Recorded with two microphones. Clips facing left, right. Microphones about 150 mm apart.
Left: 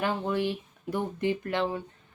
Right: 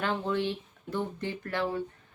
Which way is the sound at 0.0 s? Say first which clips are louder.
Left 2 dB; 10° left (ahead or behind).